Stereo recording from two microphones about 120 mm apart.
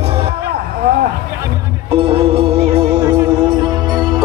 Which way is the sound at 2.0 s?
50° right (ahead or behind).